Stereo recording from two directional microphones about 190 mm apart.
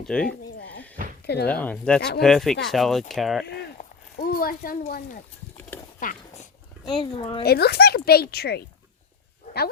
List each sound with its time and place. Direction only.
0.0 s speech: 5° left (ahead or behind)
1.3 s speech: 60° left (ahead or behind)
1.6 s speech: 5° left (ahead or behind)
2.0 s speech: 60° left (ahead or behind)
2.2 s speech: centre (ahead or behind)
4.2 s speech: 50° left (ahead or behind)
6.0 s a sound: 40° left (ahead or behind)
6.8 s speech: 25° left (ahead or behind)
7.4 s speech: 55° left (ahead or behind)